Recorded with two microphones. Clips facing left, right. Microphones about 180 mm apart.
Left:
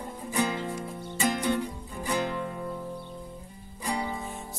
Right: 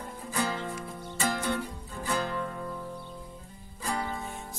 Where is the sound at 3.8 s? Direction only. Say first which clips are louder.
Left 2 dB; 15° left (ahead or behind).